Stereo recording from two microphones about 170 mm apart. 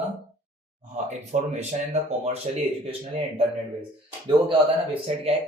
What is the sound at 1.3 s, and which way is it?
Speech, 40° right (ahead or behind).